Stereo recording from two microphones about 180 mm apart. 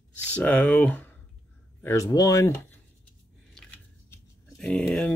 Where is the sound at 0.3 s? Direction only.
10° left (ahead or behind).